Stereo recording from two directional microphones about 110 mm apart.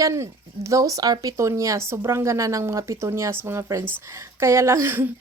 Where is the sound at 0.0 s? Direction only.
25° right (ahead or behind).